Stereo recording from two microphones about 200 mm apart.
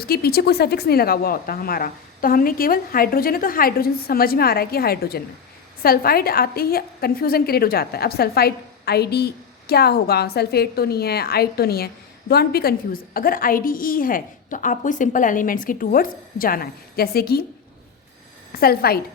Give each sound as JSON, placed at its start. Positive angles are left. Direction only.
{"t": 0.0, "sound": "a woman's voice", "side_deg": 50}
{"t": 18.5, "sound": "a woman's voice", "side_deg": 50}